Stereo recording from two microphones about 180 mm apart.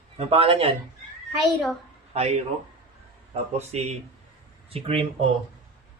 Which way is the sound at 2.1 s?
35° right (ahead or behind).